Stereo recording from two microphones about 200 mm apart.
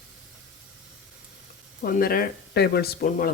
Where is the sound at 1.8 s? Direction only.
45° left (ahead or behind).